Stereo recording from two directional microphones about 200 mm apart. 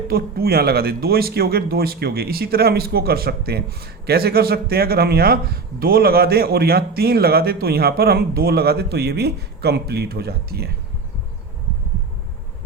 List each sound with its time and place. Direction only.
0.1 s speech: 50° right (ahead or behind)